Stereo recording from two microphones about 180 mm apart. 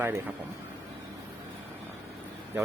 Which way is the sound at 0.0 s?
15° right (ahead or behind).